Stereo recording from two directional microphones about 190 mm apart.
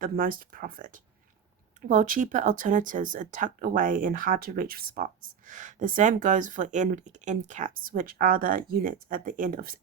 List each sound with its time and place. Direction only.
0.0 s speech: 50° right (ahead or behind)